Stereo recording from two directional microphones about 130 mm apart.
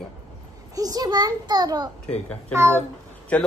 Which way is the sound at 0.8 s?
30° right (ahead or behind).